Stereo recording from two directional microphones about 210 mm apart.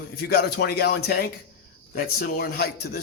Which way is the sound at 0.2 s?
50° left (ahead or behind).